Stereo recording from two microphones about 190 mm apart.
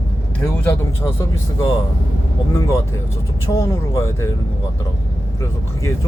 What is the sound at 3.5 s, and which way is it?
Speech, 15° left (ahead or behind).